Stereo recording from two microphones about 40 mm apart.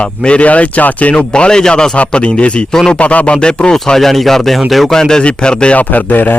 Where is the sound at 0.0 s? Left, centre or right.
Left.